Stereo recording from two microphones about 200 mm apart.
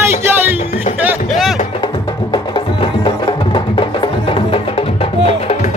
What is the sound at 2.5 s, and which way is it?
Music, 25° left (ahead or behind).